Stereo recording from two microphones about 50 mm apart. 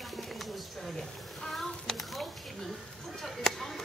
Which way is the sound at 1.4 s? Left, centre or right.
Centre.